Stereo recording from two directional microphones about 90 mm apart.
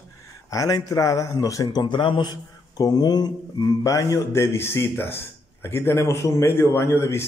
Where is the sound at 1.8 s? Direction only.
65° left (ahead or behind).